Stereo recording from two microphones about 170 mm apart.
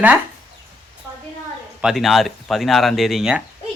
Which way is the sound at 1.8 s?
Centre (ahead or behind).